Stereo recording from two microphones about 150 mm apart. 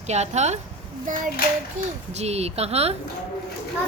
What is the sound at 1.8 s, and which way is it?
A child's voice, 45° right (ahead or behind).